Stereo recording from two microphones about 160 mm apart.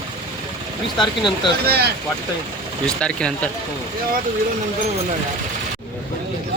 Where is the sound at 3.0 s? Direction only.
5° left (ahead or behind).